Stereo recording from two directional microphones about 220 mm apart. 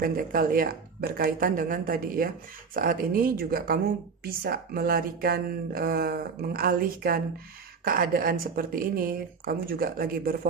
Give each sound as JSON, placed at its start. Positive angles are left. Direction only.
{"t": 0.0, "sound": "speech", "side_deg": -40}